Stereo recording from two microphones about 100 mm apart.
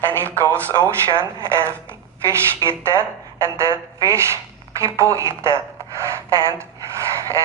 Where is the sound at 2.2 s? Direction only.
30° right (ahead or behind).